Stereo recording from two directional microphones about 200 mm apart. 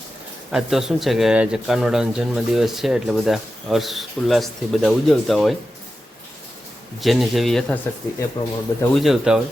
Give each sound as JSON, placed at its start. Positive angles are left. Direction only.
{"t": 0.5, "sound": "speech", "side_deg": 0}
{"t": 7.0, "sound": "speech", "side_deg": 0}
{"t": 8.4, "sound": "speech", "side_deg": 20}
{"t": 9.0, "sound": "speech", "side_deg": 0}